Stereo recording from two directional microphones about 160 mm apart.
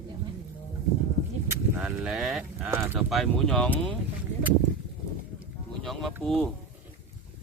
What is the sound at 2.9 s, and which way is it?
Speech, centre (ahead or behind).